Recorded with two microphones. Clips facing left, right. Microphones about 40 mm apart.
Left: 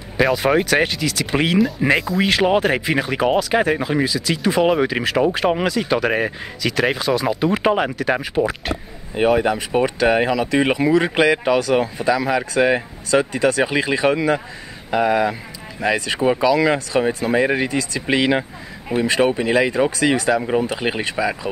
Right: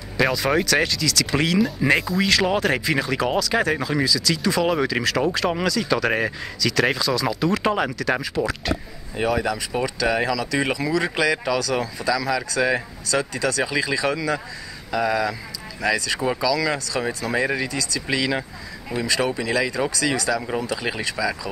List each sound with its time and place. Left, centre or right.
0.2 s speech: centre
1.9 s speech: centre
2.1 s speech: left
6.0 s speech: centre
6.6 s speech: left